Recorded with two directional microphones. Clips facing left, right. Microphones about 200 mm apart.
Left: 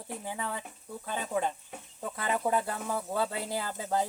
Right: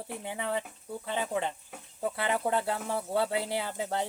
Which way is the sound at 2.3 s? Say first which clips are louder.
Left 2 dB; 25° right (ahead or behind).